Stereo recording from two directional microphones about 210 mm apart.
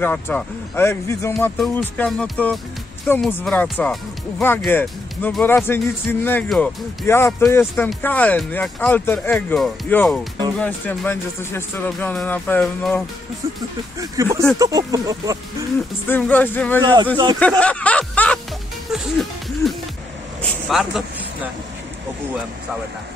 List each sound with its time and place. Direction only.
0.0 s speech: 10° left (ahead or behind)
13.9 s speech: 15° right (ahead or behind)
16.1 s speech: 10° left (ahead or behind)
16.8 s speech: 20° right (ahead or behind)
17.4 s music: 5° left (ahead or behind)
20.6 s a sound: centre (ahead or behind)